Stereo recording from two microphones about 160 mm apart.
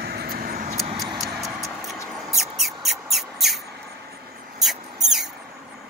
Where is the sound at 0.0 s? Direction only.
75° right (ahead or behind).